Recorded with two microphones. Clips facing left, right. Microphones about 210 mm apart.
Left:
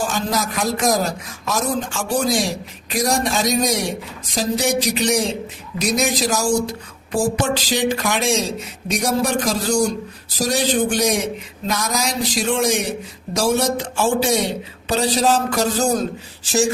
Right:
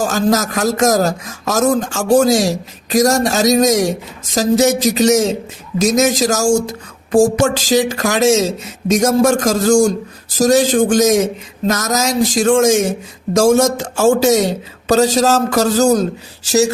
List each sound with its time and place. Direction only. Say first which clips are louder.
0.0 s speech: right 7 dB; 45° right (ahead or behind)